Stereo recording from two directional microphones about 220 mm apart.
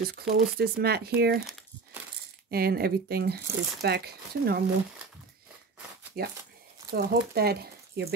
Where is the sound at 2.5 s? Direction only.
45° right (ahead or behind).